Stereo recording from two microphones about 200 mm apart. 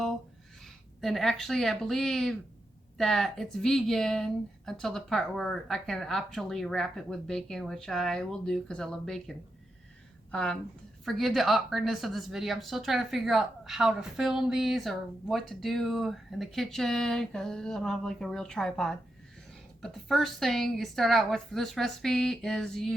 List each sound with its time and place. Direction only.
0.6 s a woman's voice: centre (ahead or behind)
10.3 s a woman's voice: 5° left (ahead or behind)